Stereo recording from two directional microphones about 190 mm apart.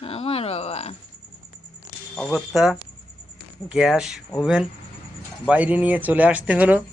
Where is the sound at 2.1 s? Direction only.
Centre (ahead or behind).